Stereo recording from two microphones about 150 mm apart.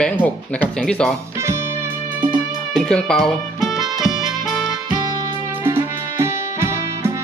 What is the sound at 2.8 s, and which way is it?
Music, 5° left (ahead or behind).